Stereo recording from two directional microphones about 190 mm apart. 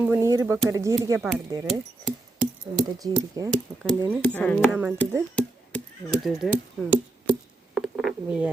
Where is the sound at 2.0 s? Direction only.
5° right (ahead or behind).